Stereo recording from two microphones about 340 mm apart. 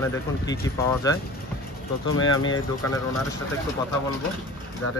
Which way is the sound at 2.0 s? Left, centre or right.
Left.